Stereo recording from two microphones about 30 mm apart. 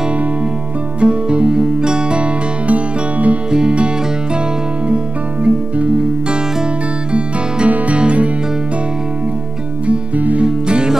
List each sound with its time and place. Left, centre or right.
1.0 s music: right
1.6 s music: right
2.7 s music: right
4.8 s music: right
7.1 s music: right
10.1 s music: right
10.4 s music: right